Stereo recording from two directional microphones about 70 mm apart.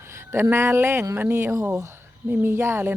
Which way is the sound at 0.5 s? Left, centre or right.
Right.